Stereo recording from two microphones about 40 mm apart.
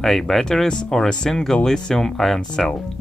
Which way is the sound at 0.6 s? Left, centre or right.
Centre.